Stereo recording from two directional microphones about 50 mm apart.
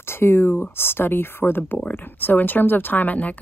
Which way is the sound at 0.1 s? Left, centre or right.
Left.